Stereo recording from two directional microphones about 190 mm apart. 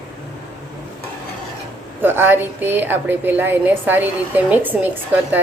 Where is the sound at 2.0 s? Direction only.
10° right (ahead or behind).